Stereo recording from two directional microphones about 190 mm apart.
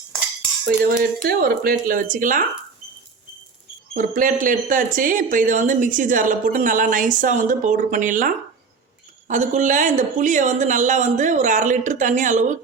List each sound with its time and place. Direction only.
0.6 s speech: 55° right (ahead or behind)
3.9 s speech: 45° right (ahead or behind)